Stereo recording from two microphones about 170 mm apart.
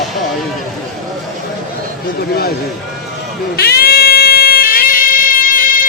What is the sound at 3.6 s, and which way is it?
Music, 65° left (ahead or behind).